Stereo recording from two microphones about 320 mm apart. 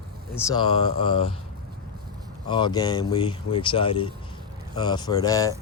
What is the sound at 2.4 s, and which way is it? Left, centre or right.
Speech, centre.